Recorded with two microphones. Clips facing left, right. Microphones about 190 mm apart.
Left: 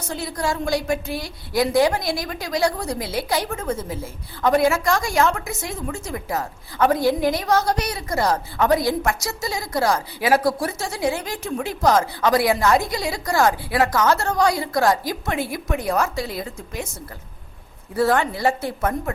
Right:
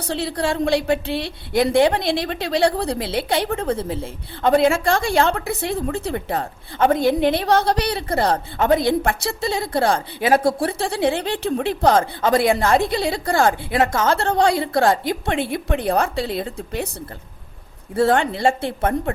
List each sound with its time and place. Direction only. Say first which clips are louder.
0.0 s a woman's voice: right 3 dB; 30° right (ahead or behind)
17.9 s a woman's voice: right 2 dB; 25° right (ahead or behind)